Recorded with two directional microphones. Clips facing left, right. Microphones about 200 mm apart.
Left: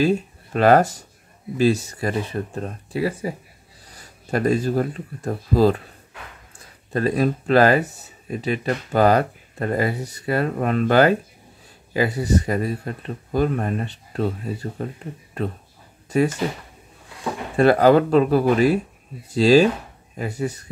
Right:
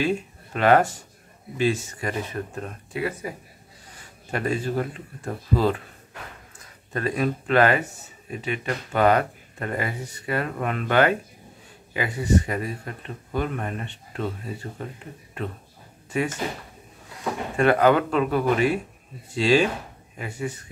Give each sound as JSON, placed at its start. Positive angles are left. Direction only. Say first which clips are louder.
{"t": 0.0, "sound": "speech", "louder": "left 5 dB", "side_deg": 40}
{"t": 17.6, "sound": "speech", "louder": "left 4 dB", "side_deg": 35}